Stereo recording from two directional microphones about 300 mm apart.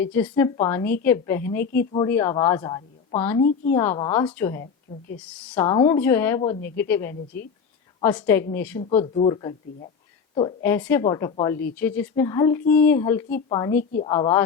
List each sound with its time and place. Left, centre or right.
0.0 s a woman's voice: centre
8.8 s a woman's voice: left